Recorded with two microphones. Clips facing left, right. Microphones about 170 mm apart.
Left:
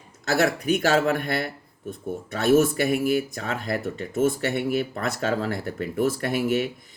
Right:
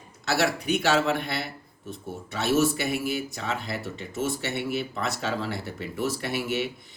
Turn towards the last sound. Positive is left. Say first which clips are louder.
# left 5 dB
turn(degrees=50)  # may be behind; listen again after turning